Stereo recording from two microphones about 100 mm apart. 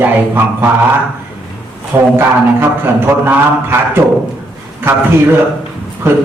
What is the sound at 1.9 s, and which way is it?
Speech, 20° right (ahead or behind).